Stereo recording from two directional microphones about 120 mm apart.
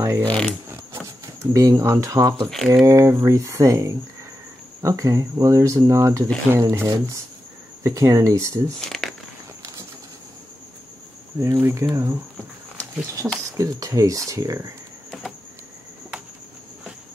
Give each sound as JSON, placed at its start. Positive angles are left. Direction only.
{"t": 0.2, "sound": "speech", "side_deg": 10}
{"t": 0.7, "sound": "a sound", "side_deg": -20}
{"t": 2.7, "sound": "speech", "side_deg": -30}
{"t": 8.7, "sound": "speech", "side_deg": 5}
{"t": 11.3, "sound": "speech", "side_deg": -25}